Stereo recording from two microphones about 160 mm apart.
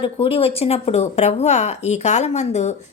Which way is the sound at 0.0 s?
35° left (ahead or behind).